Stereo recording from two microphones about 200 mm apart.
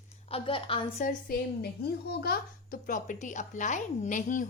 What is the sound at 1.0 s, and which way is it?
A woman's voice, 45° left (ahead or behind).